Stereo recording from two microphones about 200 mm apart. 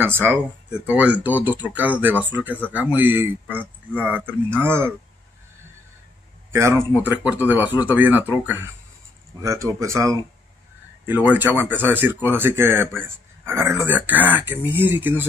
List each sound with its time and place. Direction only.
0.0 s speech: 10° right (ahead or behind)
6.5 s speech: 15° right (ahead or behind)